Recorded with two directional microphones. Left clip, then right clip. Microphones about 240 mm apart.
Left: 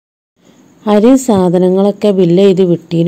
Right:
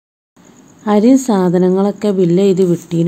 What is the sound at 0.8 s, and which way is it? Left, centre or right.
A woman's voice, centre.